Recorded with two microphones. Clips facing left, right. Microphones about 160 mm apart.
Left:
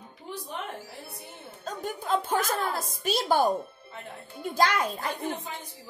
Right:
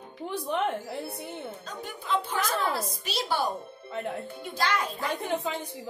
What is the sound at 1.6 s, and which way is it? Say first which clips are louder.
A woman's voice: left 5 dB; 45° left (ahead or behind).